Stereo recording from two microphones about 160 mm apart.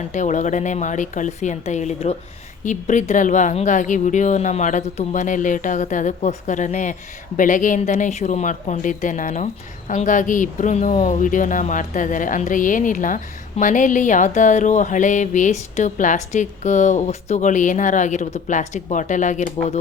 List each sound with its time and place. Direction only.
0.1 s speech: 50° left (ahead or behind)